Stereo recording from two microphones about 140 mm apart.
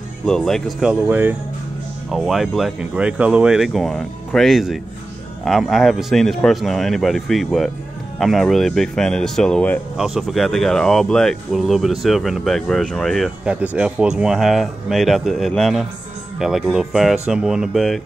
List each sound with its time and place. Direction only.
0.2 s speech: 5° left (ahead or behind)
1.0 s speech: 15° right (ahead or behind)
2.0 s speech: centre (ahead or behind)